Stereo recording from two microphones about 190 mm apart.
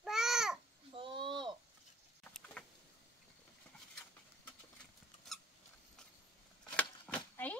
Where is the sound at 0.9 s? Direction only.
25° right (ahead or behind).